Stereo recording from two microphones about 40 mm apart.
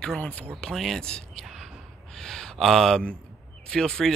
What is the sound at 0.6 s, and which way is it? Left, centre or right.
Speech, centre.